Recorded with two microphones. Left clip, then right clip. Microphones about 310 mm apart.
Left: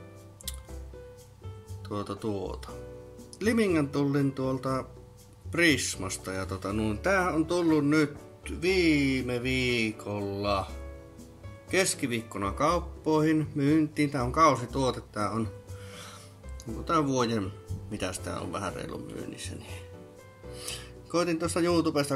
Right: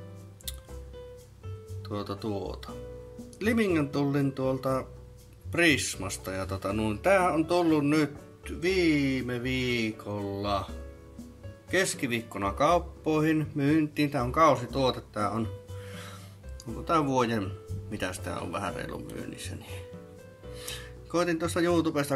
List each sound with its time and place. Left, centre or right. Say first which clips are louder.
1.9 s speech: left 1 dB; centre